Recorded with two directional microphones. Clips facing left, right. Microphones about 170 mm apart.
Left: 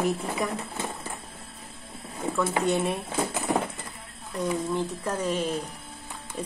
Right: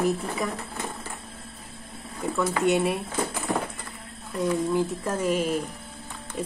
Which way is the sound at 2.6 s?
Centre (ahead or behind).